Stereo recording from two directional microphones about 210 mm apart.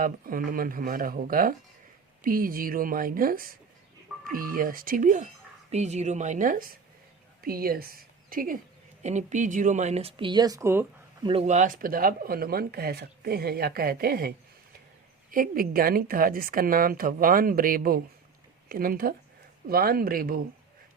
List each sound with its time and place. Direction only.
0.0 s speech: 40° right (ahead or behind); by 11.3 s 10° right (ahead or behind)
11.3 s speech: 30° right (ahead or behind)